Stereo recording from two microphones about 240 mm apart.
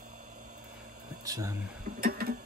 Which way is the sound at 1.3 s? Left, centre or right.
Centre.